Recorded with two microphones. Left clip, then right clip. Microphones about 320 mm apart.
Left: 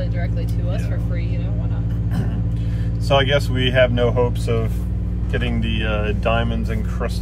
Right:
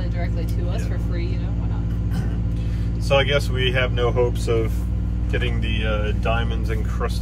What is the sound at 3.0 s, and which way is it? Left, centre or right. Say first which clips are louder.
Speech: left 2 dB; centre.